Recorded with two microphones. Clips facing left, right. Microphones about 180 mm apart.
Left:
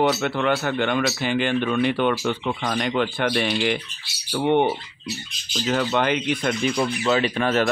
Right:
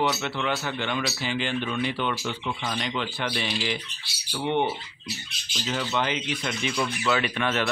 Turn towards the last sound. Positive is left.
turn(degrees=35)  # may be behind; listen again after turning